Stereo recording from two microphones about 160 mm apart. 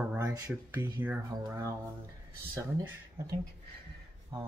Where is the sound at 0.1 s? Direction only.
20° right (ahead or behind).